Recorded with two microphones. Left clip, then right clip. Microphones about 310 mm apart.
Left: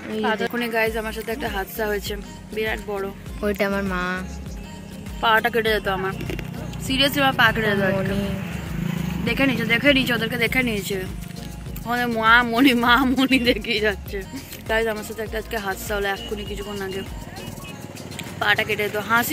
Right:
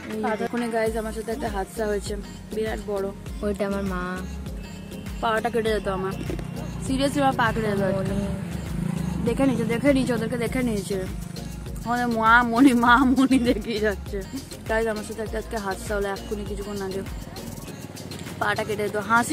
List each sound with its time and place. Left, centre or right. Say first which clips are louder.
0.2 s speech: left 3 dB; centre
3.4 s speech: left 4 dB; centre
5.2 s speech: left 5 dB; centre
7.9 s speech: left 3 dB; centre
8.8 s speech: left 1 dB; centre
11.8 s speech: left 1 dB; centre
18.4 s speech: left 4 dB; centre